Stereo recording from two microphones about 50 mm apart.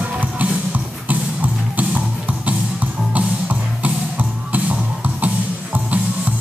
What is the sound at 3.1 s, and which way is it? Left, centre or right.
Music, right.